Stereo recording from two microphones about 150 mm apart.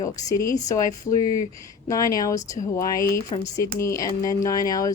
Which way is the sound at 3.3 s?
40° left (ahead or behind).